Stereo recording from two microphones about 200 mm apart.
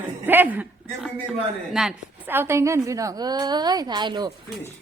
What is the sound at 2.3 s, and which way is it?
A woman's voice, 10° right (ahead or behind).